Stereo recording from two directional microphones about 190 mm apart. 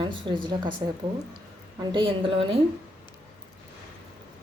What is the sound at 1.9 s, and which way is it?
Speech, 25° right (ahead or behind).